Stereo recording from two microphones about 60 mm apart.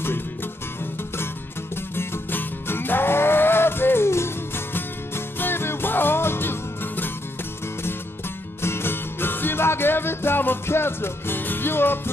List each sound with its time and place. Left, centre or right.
2.0 s music: left
8.6 s music: left